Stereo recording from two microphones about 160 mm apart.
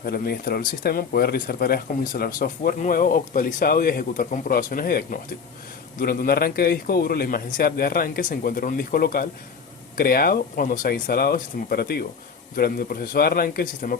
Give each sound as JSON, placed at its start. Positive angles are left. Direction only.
{"t": 0.0, "sound": "a man's voice", "side_deg": 70}